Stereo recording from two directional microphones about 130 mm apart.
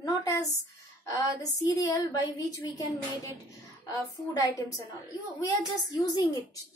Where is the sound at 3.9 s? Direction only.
30° left (ahead or behind).